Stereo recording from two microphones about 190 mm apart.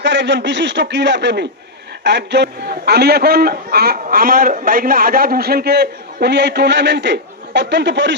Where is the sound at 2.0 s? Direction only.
65° right (ahead or behind).